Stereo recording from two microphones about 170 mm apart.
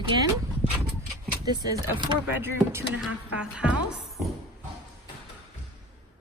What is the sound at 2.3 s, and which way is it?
Speech, 10° right (ahead or behind).